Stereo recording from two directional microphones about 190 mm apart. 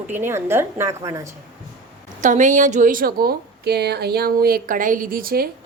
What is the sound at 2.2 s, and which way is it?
A woman's voice, 40° right (ahead or behind).